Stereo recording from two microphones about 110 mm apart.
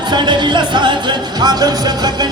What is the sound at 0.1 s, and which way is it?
Music, 45° right (ahead or behind).